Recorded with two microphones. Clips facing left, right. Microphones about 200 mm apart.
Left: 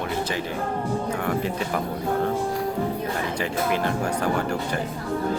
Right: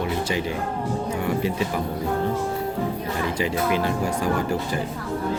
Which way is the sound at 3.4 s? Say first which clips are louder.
Right 3 dB; 50° left (ahead or behind).